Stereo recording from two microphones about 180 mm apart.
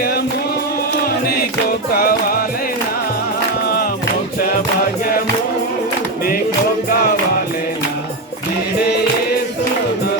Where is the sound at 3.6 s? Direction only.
60° left (ahead or behind).